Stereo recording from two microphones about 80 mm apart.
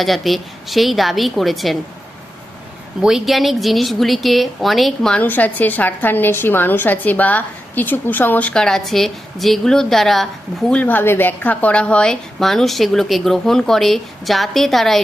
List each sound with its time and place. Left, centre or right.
0.0 s speech: centre
3.0 s speech: centre
5.1 s a woman's voice: left; by 10.2 s centre
10.7 s a woman's voice: centre
12.4 s speech: centre